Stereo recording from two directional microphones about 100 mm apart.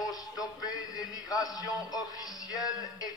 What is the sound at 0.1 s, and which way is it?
Music, 40° left (ahead or behind).